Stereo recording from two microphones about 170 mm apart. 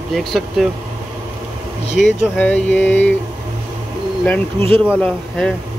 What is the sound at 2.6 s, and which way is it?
Speech, 10° left (ahead or behind).